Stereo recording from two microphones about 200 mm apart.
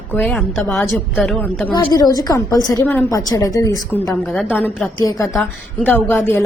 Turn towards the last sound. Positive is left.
turn(degrees=10)  # may be behind; listen again after turning